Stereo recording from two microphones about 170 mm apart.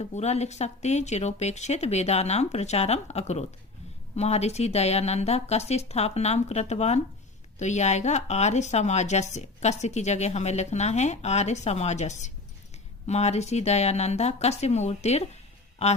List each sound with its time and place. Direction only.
0.0 s a woman's voice: 40° left (ahead or behind)